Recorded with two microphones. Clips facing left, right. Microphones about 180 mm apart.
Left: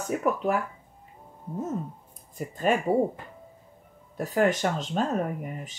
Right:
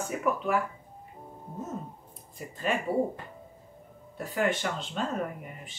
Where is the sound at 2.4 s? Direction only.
45° left (ahead or behind).